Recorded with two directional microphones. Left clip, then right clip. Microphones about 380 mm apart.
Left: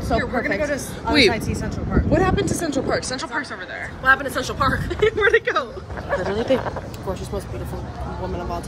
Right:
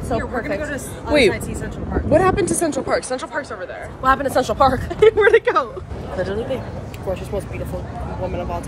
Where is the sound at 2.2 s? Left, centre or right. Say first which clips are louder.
Right 6 dB; centre.